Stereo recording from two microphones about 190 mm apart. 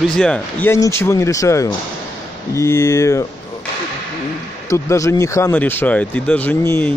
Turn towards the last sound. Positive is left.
turn(degrees=10)  # may be behind; listen again after turning